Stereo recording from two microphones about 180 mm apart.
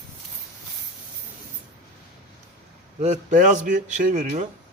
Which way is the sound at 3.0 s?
40° right (ahead or behind).